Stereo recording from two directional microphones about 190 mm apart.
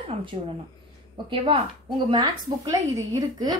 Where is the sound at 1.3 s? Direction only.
30° right (ahead or behind).